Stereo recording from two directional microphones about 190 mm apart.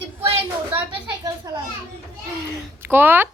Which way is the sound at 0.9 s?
20° right (ahead or behind).